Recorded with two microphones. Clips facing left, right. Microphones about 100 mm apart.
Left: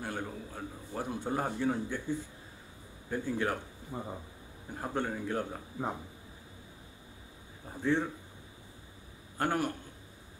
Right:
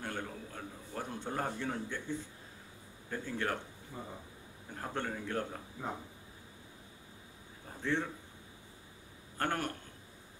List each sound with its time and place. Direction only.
0.0 s a man's voice: 10° left (ahead or behind)
3.9 s speech: 30° left (ahead or behind)
4.6 s a man's voice: 10° left (ahead or behind)
7.8 s a man's voice: 15° left (ahead or behind)
9.4 s a man's voice: 10° left (ahead or behind)